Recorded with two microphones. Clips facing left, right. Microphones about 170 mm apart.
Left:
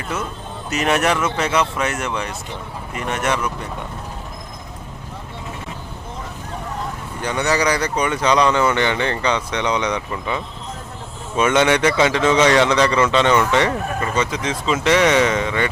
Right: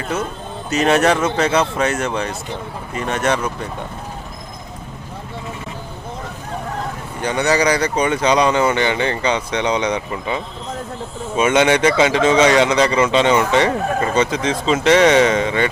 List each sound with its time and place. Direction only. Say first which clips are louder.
0.7 s speech: right 4 dB; 30° right (ahead or behind)
7.2 s speech: right 3 dB; 20° right (ahead or behind)